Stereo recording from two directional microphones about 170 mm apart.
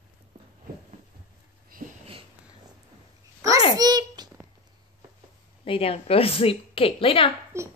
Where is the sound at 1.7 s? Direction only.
55° right (ahead or behind).